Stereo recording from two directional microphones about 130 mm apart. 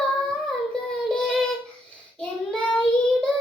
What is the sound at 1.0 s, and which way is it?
Child singing, 5° left (ahead or behind).